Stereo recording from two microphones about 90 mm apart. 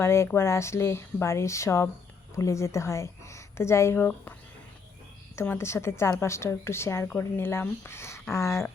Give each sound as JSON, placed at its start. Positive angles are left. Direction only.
{"t": 0.0, "sound": "a woman's voice", "side_deg": 30}
{"t": 5.4, "sound": "a woman's voice", "side_deg": 30}